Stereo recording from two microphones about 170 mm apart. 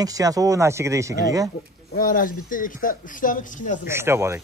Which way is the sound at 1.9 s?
55° left (ahead or behind).